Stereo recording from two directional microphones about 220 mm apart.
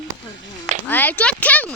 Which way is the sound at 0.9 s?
10° left (ahead or behind).